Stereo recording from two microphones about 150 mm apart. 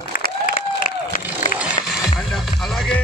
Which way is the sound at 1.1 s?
60° left (ahead or behind).